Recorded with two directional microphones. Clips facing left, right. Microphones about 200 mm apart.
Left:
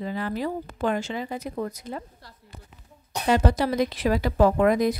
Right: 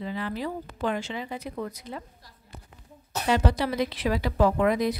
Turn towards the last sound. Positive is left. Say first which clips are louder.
# left 3 dB
turn(degrees=45)  # may be behind; listen again after turning